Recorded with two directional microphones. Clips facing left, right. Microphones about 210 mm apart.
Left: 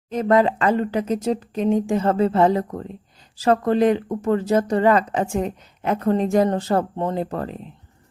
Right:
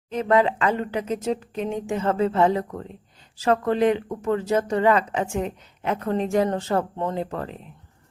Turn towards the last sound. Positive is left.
turn(degrees=40)  # may be behind; listen again after turning